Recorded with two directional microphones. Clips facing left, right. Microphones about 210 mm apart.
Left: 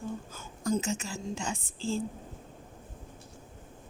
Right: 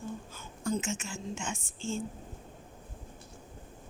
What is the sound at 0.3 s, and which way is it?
Speech, 40° left (ahead or behind).